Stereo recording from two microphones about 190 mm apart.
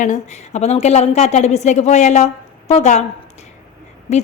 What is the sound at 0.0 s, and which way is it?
A woman's voice, 40° left (ahead or behind).